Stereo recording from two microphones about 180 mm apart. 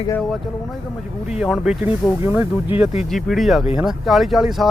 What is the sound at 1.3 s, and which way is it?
Speech, 5° right (ahead or behind).